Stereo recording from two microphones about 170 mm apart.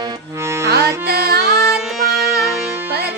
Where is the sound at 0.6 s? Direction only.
70° right (ahead or behind).